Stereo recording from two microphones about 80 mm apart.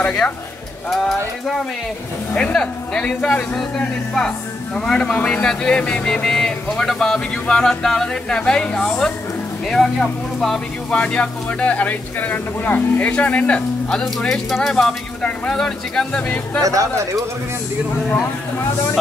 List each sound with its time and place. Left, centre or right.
0.0 s speech: centre
16.6 s speech: right